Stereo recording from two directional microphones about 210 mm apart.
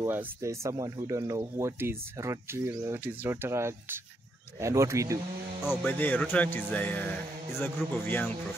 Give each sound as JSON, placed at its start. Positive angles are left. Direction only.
{"t": 0.0, "sound": "speech", "side_deg": -15}
{"t": 5.9, "sound": "music", "side_deg": 10}